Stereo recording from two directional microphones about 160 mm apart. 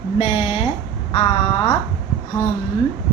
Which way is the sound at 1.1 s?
30° left (ahead or behind).